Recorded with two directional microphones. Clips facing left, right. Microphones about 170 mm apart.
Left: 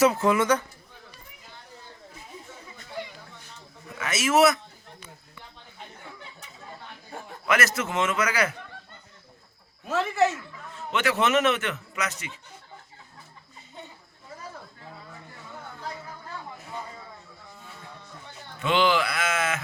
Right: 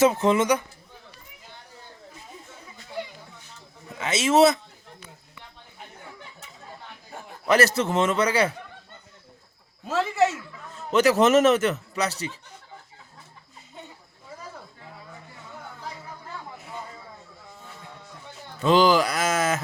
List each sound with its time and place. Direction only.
0.0 s speech: 25° right (ahead or behind)
3.9 s speech: 25° right (ahead or behind)
7.4 s a man's voice: 35° right (ahead or behind)
10.9 s a man's voice: 40° right (ahead or behind)
18.6 s a man's voice: 40° right (ahead or behind)